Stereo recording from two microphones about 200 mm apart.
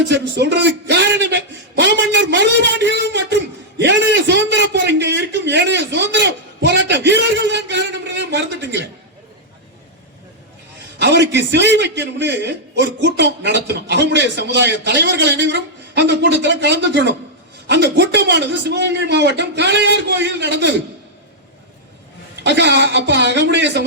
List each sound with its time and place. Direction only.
0.0 s a man's voice: 60° right (ahead or behind)
3.8 s a sound: 60° right (ahead or behind)
11.0 s a man's voice: 60° right (ahead or behind)
22.4 s a man's voice: 60° right (ahead or behind)